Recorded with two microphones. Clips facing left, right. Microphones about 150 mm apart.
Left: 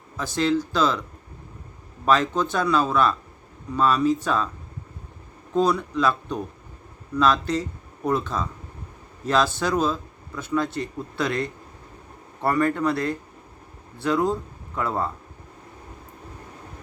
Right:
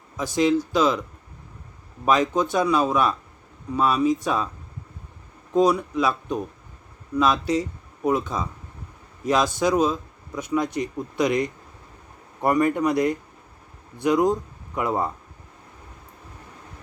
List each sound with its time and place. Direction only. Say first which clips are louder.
0.2 s speech: right 2 dB; 10° right (ahead or behind)
2.0 s speech: right 1 dB; 10° right (ahead or behind)
5.5 s speech: right 2 dB; 10° right (ahead or behind)